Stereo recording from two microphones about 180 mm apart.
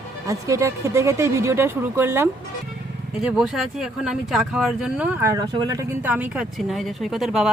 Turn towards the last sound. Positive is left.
turn(degrees=0)  # may be behind; listen again after turning